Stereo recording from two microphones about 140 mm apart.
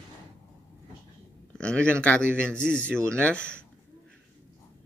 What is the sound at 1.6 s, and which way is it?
A man's voice, 5° left (ahead or behind).